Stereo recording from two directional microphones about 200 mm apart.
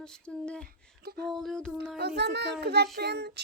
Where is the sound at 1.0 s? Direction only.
50° right (ahead or behind).